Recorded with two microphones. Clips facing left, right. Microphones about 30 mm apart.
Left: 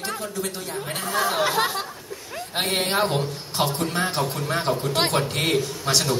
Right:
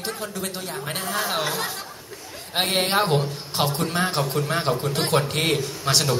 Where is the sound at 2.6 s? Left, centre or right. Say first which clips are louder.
Right 1 dB; centre.